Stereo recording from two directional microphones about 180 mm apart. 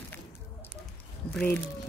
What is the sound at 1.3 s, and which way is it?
Speech, 10° left (ahead or behind).